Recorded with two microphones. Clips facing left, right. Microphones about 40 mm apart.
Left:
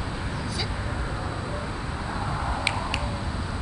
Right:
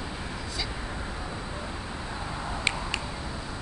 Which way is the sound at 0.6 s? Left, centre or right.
Centre.